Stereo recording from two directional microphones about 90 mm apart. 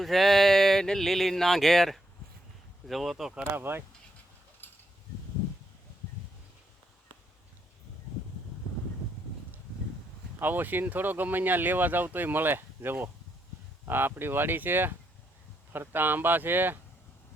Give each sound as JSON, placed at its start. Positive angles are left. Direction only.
{"t": 0.0, "sound": "speech", "side_deg": 0}
{"t": 3.5, "sound": "speech", "side_deg": -25}
{"t": 10.4, "sound": "speech", "side_deg": -20}